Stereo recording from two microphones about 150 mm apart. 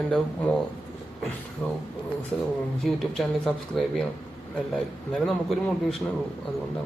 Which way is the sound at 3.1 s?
Centre (ahead or behind).